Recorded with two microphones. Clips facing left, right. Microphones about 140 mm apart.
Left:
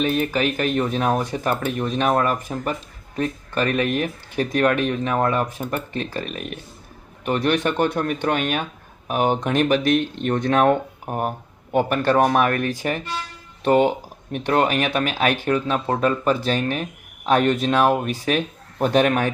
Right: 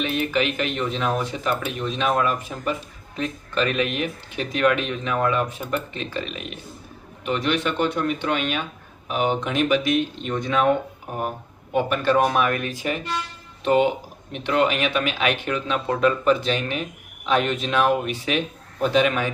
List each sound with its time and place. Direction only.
0.0 s speech: 40° left (ahead or behind)
11.7 s speech: 45° left (ahead or behind)